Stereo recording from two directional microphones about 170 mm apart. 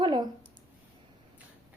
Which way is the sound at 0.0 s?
25° right (ahead or behind).